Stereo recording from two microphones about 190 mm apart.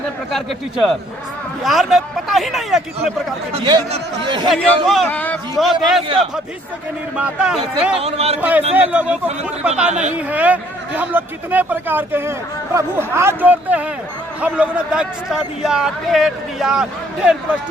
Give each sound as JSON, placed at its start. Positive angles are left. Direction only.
{"t": 0.3, "sound": "speech", "side_deg": 0}
{"t": 3.5, "sound": "speech", "side_deg": -30}
{"t": 4.4, "sound": "speech", "side_deg": 0}
{"t": 7.2, "sound": "speech", "side_deg": -5}
{"t": 8.0, "sound": "speech", "side_deg": -35}
{"t": 8.4, "sound": "a man's voice", "side_deg": -10}
{"t": 9.9, "sound": "speech", "side_deg": -40}
{"t": 10.2, "sound": "a man's voice", "side_deg": -10}